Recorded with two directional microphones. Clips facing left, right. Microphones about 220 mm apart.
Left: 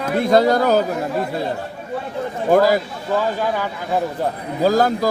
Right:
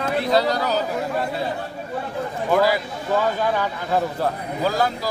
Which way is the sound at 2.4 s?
45° left (ahead or behind).